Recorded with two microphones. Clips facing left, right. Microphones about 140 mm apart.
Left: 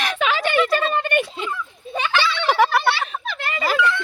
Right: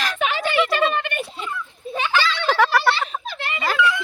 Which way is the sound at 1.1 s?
80° left.